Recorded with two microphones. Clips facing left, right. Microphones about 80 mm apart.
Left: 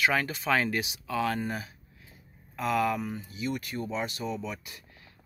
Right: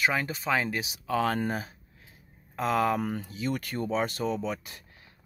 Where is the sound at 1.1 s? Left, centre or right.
Right.